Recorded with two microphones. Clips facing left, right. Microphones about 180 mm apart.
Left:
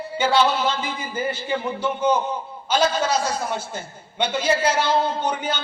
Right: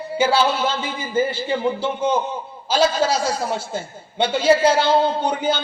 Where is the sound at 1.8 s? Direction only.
30° right (ahead or behind).